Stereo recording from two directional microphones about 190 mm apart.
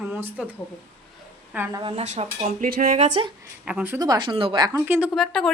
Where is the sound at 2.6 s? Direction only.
50° right (ahead or behind).